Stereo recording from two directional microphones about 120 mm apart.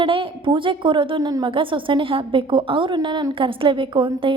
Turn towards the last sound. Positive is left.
turn(degrees=-45)  # may be behind; listen again after turning